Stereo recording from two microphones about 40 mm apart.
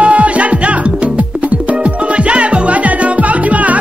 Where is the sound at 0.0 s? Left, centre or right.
Right.